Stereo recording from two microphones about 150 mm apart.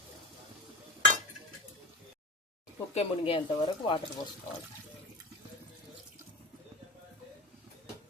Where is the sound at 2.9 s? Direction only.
40° left (ahead or behind).